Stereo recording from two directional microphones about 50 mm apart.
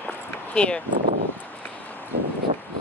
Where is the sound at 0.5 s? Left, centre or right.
Centre.